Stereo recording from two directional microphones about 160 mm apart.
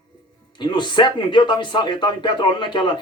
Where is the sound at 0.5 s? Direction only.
30° left (ahead or behind).